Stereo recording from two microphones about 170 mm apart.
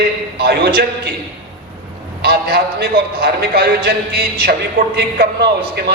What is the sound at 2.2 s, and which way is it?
A man's voice, 70° right (ahead or behind).